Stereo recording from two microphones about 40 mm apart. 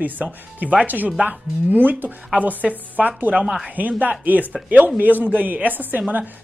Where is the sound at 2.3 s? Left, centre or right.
Right.